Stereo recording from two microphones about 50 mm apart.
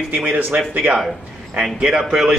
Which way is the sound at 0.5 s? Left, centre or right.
Right.